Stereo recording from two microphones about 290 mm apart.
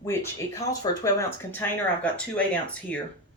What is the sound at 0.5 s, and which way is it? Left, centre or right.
Speech, centre.